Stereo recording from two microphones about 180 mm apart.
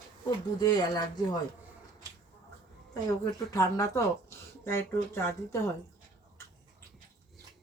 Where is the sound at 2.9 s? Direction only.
20° left (ahead or behind).